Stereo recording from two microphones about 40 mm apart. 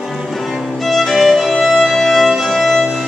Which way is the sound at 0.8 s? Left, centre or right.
Centre.